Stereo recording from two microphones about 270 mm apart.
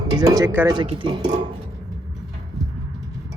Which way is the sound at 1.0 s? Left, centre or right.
Centre.